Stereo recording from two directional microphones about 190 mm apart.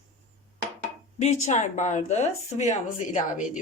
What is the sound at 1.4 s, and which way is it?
A woman's voice, 40° left (ahead or behind).